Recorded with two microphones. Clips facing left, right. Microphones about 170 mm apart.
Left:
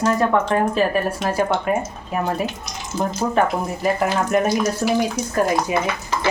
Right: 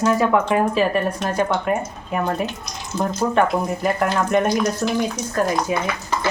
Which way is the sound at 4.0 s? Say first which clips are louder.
Right 1 dB; 5° left (ahead or behind).